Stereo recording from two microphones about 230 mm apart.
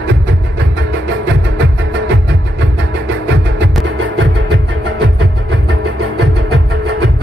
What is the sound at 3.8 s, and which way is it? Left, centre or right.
Music, right.